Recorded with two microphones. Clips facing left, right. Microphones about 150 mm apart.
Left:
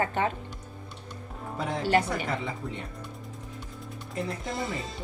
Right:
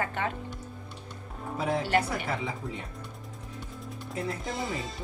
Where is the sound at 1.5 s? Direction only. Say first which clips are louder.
Left 1 dB; 5° right (ahead or behind).